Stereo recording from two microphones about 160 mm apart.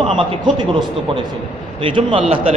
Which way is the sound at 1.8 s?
35° right (ahead or behind).